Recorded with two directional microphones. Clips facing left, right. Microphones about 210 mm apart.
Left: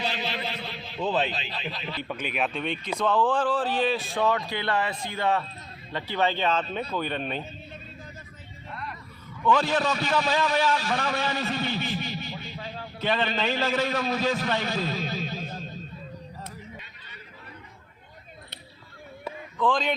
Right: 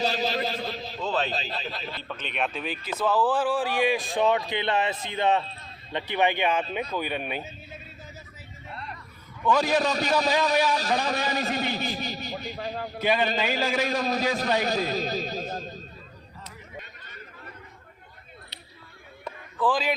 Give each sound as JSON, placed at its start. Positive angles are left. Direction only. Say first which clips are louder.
{"t": 0.0, "sound": "a sound", "louder": "right 5 dB", "side_deg": -40}
{"t": 1.0, "sound": "speech", "louder": "left 2 dB", "side_deg": 15}
{"t": 1.3, "sound": "a man's voice", "louder": "right 2 dB", "side_deg": -40}
{"t": 2.0, "sound": "speech", "louder": "left 1 dB", "side_deg": 10}
{"t": 9.5, "sound": "speech", "louder": "even", "side_deg": -10}
{"t": 9.8, "sound": "a man's voice", "louder": "right 1 dB", "side_deg": -40}
{"t": 13.0, "sound": "speech", "louder": "right 2 dB", "side_deg": -10}
{"t": 13.8, "sound": "a man's voice", "louder": "right 1 dB", "side_deg": -40}
{"t": 14.3, "sound": "a sound", "louder": "right 3 dB", "side_deg": -40}
{"t": 19.2, "sound": "a sound", "louder": "even", "side_deg": -5}